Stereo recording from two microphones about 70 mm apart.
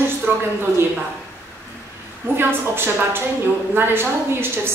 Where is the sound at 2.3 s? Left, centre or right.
Right.